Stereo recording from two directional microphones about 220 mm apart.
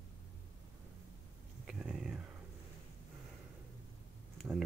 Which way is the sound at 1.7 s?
5° right (ahead or behind).